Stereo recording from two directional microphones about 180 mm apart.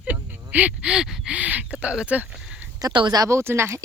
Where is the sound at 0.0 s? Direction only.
10° right (ahead or behind).